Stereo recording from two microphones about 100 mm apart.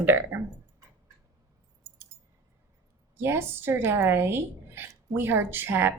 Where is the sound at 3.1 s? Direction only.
25° right (ahead or behind).